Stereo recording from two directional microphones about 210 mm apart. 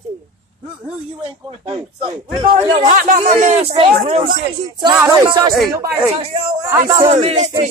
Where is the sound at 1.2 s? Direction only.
30° right (ahead or behind).